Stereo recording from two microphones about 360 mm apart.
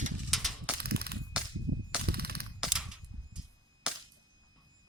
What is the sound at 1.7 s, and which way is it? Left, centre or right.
Cap gun, right.